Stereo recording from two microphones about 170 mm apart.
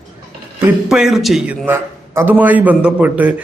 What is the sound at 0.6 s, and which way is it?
A man's voice, 5° right (ahead or behind).